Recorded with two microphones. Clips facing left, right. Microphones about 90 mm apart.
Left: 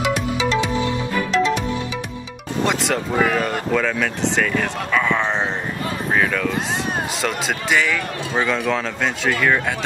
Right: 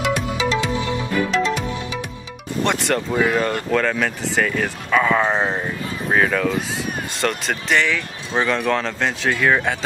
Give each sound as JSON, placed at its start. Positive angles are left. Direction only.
{"t": 0.0, "sound": "music", "side_deg": 0}
{"t": 2.6, "sound": "speech", "side_deg": 0}
{"t": 7.2, "sound": "speech", "side_deg": 5}